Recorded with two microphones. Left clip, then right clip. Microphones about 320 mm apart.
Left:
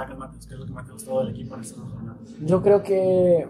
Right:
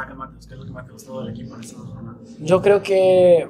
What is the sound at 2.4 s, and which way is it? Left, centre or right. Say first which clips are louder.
Speech: right 3 dB; right.